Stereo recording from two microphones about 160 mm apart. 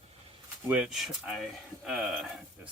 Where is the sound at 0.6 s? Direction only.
5° right (ahead or behind).